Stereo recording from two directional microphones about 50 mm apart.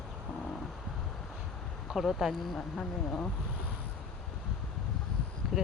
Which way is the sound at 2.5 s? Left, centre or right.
Centre.